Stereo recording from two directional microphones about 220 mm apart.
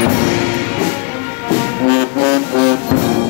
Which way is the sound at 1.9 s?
50° left (ahead or behind).